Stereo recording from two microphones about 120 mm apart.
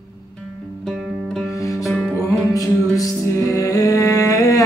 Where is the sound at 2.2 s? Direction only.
30° left (ahead or behind).